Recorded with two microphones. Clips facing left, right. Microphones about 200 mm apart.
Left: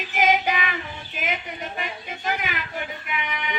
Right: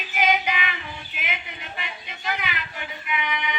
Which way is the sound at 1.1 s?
40° left (ahead or behind).